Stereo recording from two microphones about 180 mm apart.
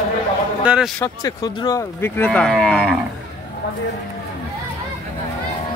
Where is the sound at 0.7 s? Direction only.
5° right (ahead or behind).